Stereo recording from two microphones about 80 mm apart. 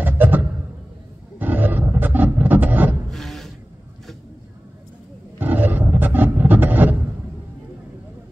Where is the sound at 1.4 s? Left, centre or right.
Right.